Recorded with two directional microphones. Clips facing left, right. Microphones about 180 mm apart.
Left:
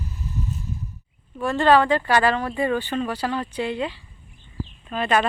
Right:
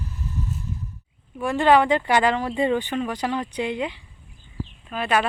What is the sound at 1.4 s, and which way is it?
Speech, 15° right (ahead or behind).